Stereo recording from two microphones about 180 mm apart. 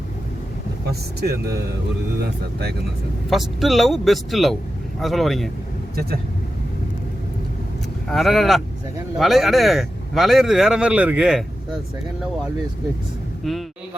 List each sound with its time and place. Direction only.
0.9 s speech: 60° right (ahead or behind)
3.2 s speech: centre (ahead or behind)
8.0 s speech: centre (ahead or behind)
13.4 s speech: centre (ahead or behind)